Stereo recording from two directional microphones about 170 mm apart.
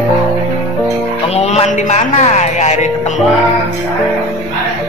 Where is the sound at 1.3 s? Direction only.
40° left (ahead or behind).